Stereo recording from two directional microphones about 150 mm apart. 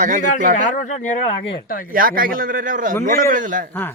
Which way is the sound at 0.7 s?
50° left (ahead or behind).